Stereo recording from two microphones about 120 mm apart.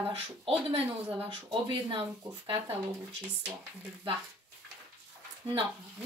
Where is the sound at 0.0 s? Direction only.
45° right (ahead or behind).